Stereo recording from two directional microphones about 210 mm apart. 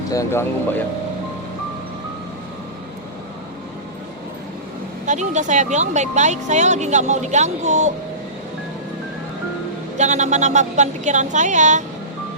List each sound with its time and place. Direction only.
0.1 s speech: 15° left (ahead or behind)
5.0 s speech: 35° right (ahead or behind)
10.0 s speech: 35° right (ahead or behind)